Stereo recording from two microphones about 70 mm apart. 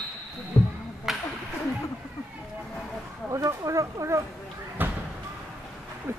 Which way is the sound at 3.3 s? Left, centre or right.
Right.